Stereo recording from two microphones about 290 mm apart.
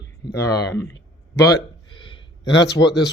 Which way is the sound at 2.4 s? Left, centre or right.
Left.